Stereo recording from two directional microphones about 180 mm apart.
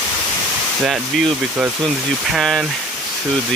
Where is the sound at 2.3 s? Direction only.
Centre (ahead or behind).